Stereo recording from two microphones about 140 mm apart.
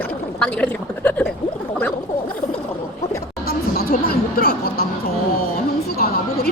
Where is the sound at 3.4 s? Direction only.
90° left.